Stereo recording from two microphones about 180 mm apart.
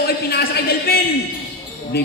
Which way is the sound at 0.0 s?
60° left (ahead or behind).